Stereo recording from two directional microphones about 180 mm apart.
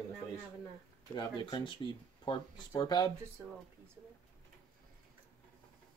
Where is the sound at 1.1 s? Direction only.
25° left (ahead or behind).